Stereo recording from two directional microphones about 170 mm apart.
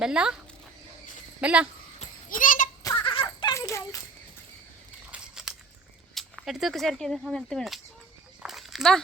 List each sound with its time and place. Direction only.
0.0 s speech: 5° right (ahead or behind)
1.4 s speech: 5° right (ahead or behind)
2.0 s goat: 50° left (ahead or behind)
2.8 s a sound: 25° left (ahead or behind)
5.1 s scissors: 5° right (ahead or behind)
6.1 s speech: centre (ahead or behind)
8.4 s a sound: centre (ahead or behind)